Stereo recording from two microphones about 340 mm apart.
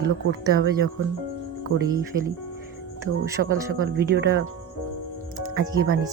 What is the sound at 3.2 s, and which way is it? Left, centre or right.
Speech, centre.